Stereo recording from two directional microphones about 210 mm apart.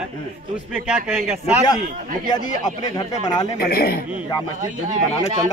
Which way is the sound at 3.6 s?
45° left (ahead or behind).